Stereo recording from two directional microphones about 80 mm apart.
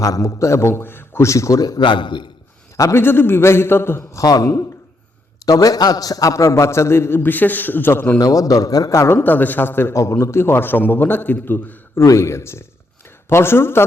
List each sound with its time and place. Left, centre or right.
0.0 s a man's voice: left
1.8 s a man's voice: left
2.7 s a man's voice: left
3.0 s a man's voice: left
4.2 s a man's voice: left
8.2 s a man's voice: left
11.9 s a man's voice: left